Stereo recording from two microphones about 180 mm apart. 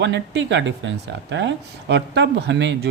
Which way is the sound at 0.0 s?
75° right (ahead or behind).